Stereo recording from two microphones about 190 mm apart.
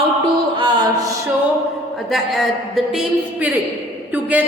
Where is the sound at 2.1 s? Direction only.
Centre (ahead or behind).